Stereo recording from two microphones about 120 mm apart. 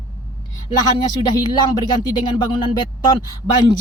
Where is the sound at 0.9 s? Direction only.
40° left (ahead or behind).